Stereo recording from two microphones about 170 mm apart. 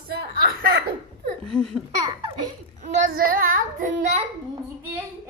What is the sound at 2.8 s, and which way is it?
A child's voice, 55° right (ahead or behind).